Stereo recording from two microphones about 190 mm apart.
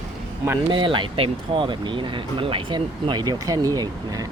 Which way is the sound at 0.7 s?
25° right (ahead or behind).